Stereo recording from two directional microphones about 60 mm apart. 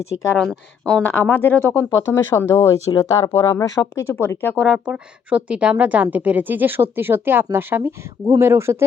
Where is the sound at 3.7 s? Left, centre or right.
Left.